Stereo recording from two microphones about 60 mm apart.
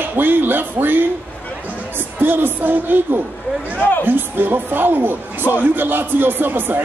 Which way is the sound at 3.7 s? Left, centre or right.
Left.